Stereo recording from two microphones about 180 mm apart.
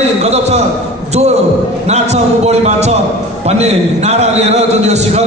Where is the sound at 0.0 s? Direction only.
35° right (ahead or behind).